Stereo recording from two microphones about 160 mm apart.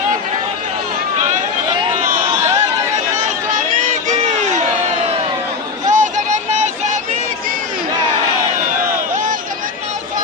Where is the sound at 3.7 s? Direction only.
50° right (ahead or behind).